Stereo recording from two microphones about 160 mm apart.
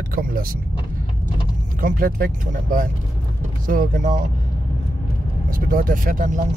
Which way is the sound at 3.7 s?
55° right (ahead or behind).